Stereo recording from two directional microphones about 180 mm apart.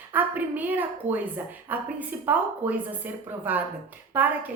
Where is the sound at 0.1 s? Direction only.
10° right (ahead or behind).